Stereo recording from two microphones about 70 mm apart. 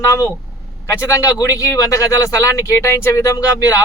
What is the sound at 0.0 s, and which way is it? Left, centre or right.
Speech, left.